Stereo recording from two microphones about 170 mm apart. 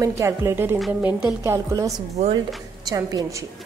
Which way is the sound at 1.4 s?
20° right (ahead or behind).